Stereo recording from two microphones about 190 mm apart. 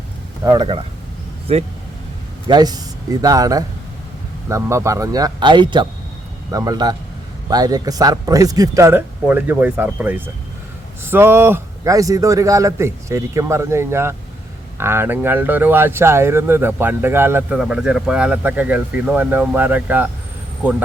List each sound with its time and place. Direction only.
0.4 s speech: 20° right (ahead or behind)